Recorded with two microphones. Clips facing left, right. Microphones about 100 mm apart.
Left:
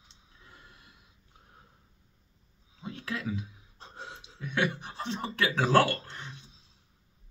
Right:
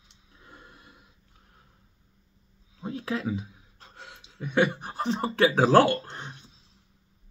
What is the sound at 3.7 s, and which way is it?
Gasp, 25° left (ahead or behind).